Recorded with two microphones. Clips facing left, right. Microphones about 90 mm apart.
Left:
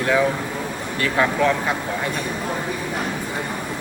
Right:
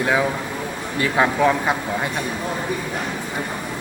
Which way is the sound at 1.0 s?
20° right (ahead or behind).